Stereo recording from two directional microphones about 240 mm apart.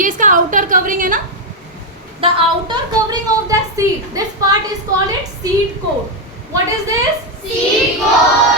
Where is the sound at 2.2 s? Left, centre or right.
Right.